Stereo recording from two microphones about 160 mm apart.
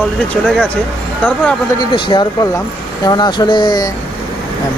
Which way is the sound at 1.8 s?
30° left (ahead or behind).